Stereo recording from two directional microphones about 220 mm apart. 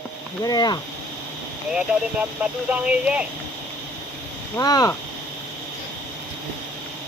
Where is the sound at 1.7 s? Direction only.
5° right (ahead or behind).